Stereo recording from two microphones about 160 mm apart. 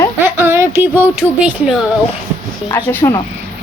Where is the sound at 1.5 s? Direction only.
5° right (ahead or behind).